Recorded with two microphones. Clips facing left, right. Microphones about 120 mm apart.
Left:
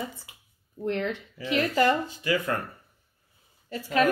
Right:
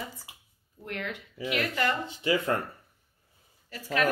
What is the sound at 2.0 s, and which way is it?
Speech, 25° right (ahead or behind).